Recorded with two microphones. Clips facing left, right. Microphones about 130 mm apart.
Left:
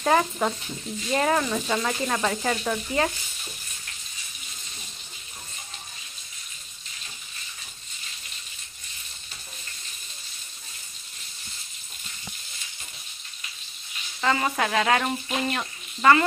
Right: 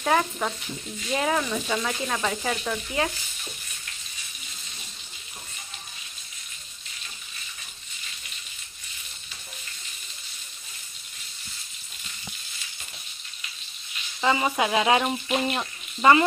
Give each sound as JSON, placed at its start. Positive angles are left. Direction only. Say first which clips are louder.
{"t": 0.0, "sound": "sizzle", "louder": "left 2 dB", "side_deg": 5}
{"t": 1.5, "sound": "sizzle", "louder": "left 1 dB", "side_deg": 5}
{"t": 14.2, "sound": "speech", "louder": "right 1 dB", "side_deg": -15}